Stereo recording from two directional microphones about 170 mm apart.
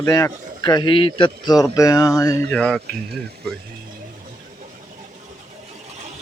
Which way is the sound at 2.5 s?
5° left (ahead or behind).